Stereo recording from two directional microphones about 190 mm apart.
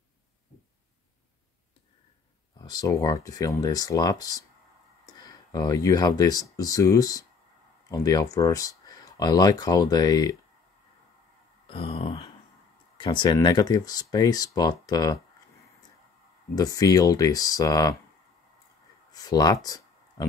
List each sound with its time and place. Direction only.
2.6 s speech: 20° left (ahead or behind)
11.6 s a sound: 30° left (ahead or behind)
12.9 s speech: 25° left (ahead or behind)
19.1 s speech: 20° left (ahead or behind)